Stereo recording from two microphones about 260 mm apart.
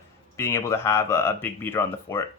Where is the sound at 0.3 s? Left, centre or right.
Centre.